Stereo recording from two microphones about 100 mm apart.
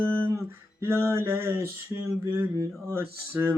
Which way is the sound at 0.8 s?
25° right (ahead or behind).